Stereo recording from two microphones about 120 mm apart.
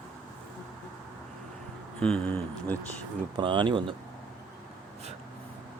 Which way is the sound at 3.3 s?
40° right (ahead or behind).